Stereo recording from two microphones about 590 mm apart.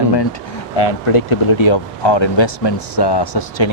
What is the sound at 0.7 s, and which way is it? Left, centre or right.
Speech, left.